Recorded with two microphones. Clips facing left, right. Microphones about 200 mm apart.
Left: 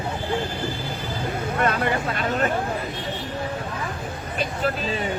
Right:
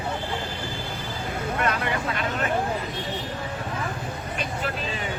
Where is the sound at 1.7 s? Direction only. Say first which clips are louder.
Left 5 dB; 40° left (ahead or behind).